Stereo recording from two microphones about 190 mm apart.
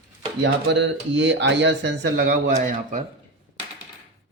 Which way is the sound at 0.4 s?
70° right (ahead or behind).